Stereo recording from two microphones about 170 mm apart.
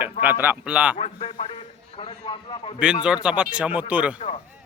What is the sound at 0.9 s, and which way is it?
A man's voice, 35° left (ahead or behind).